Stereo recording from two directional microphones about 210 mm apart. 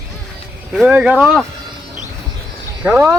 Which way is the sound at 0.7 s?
5° right (ahead or behind).